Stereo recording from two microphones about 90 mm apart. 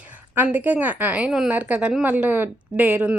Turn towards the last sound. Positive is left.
turn(degrees=-15)  # may be behind; listen again after turning